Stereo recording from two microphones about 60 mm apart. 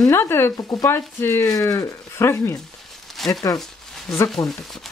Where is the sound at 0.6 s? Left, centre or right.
Left.